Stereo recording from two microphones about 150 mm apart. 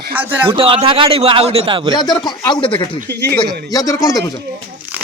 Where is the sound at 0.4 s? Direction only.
35° right (ahead or behind).